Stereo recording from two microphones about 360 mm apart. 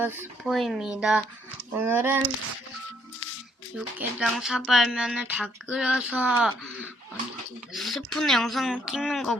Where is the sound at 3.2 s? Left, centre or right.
Left.